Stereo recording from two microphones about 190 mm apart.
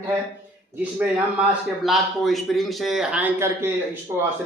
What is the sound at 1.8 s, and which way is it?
A man's voice, centre (ahead or behind).